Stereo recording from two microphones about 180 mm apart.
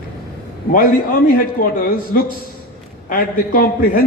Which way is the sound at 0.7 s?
50° left (ahead or behind).